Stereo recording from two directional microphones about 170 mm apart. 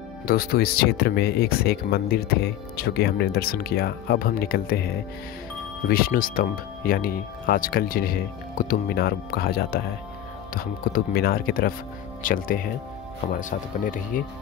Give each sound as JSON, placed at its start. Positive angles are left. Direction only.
{"t": 0.3, "sound": "speech", "side_deg": 60}